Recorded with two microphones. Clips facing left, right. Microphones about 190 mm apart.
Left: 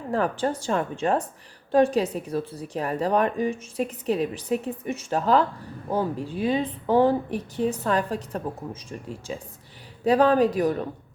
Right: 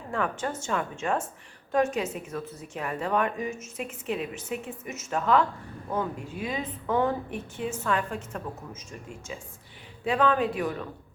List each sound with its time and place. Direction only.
0.1 s a woman's voice: 35° left (ahead or behind)